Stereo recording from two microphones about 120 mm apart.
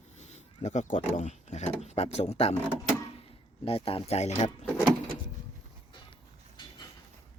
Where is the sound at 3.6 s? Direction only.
50° left (ahead or behind); by 4.5 s 70° left (ahead or behind).